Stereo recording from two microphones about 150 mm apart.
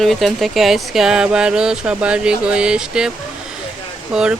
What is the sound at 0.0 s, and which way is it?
Speech, centre (ahead or behind).